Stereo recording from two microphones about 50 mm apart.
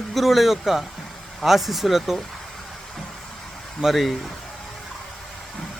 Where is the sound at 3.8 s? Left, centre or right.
Centre.